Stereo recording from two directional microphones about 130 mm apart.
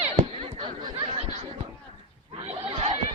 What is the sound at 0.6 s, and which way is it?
Chatter, 45° right (ahead or behind).